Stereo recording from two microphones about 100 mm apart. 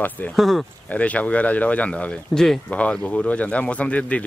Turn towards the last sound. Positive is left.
turn(degrees=15)  # may be behind; listen again after turning